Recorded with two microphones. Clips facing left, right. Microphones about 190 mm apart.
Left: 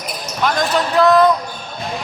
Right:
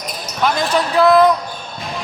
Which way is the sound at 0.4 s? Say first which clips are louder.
Right 1 dB; 10° right (ahead or behind).